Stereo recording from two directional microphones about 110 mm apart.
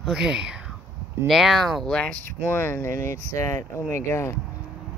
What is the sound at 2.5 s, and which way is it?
Speech, 20° left (ahead or behind).